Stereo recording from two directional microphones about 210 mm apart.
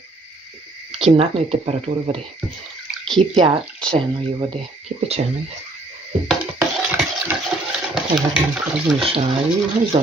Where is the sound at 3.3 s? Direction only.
25° right (ahead or behind).